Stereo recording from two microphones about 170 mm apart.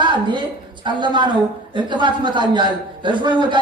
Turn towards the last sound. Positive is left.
turn(degrees=-25)  # may be behind; listen again after turning